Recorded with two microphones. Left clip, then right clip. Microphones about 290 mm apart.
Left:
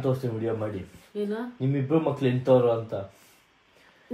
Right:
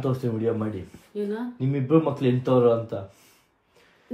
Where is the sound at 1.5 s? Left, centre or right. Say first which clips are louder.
Right 4 dB; right.